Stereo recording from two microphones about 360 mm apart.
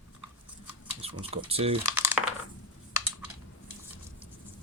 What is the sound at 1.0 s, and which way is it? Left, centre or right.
Speech, centre.